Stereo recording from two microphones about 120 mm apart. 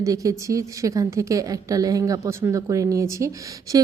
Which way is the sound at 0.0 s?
30° right (ahead or behind).